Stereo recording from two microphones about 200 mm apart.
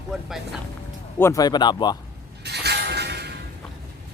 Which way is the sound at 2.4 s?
55° right (ahead or behind).